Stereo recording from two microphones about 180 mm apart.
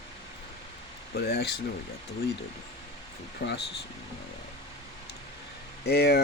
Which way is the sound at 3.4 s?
55° left (ahead or behind).